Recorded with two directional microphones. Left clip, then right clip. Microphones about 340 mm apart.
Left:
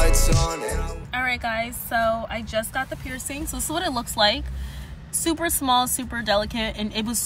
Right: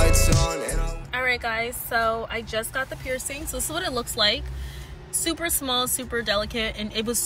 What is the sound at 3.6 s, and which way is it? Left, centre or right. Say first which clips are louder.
Speech: left 2 dB; centre.